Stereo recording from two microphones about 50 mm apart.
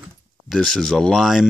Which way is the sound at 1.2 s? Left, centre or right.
Centre.